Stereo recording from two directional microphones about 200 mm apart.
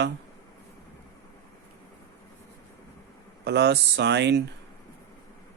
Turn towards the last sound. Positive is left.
turn(degrees=-60)  # may be behind; listen again after turning